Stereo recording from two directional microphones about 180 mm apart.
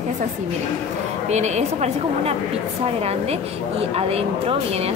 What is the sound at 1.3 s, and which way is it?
A woman's voice, 40° right (ahead or behind).